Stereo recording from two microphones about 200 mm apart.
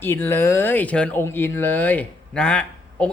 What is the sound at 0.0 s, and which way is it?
Speech, 10° left (ahead or behind).